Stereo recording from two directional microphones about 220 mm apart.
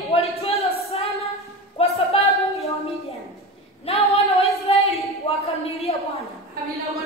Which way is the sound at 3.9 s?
25° left (ahead or behind).